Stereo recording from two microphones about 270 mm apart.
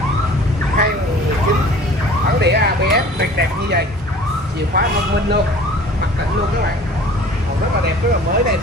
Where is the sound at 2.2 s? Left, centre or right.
Right.